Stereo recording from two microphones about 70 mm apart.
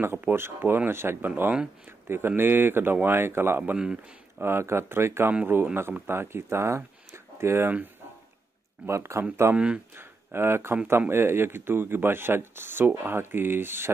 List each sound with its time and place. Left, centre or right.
0.0 s a man's voice: right
3.7 s speech: centre
4.4 s a man's voice: right
8.8 s a man's voice: right